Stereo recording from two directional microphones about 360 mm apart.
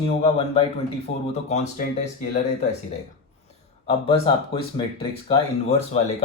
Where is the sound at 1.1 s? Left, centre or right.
Left.